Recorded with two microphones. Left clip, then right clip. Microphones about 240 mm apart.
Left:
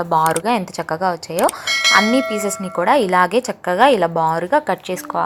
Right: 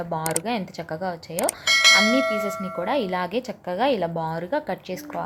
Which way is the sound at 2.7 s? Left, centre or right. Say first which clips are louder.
Left 12 dB; left.